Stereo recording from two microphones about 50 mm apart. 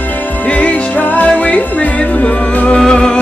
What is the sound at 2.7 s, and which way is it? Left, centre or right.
Music, centre.